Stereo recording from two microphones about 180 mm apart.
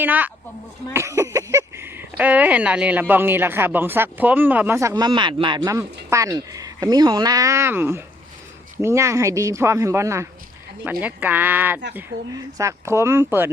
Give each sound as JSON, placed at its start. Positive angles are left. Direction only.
{"t": 0.0, "sound": "speech", "side_deg": -10}